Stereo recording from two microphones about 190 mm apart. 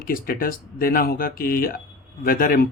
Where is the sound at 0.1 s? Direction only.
50° left (ahead or behind).